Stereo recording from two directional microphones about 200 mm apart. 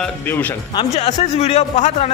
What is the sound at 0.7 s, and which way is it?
Speech, 30° left (ahead or behind).